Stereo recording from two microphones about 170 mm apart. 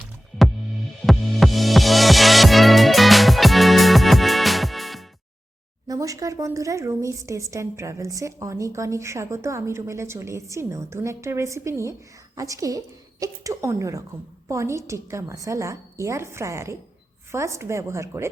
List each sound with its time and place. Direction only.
0.0 s music: 5° right (ahead or behind)
5.9 s a woman's voice: 20° right (ahead or behind)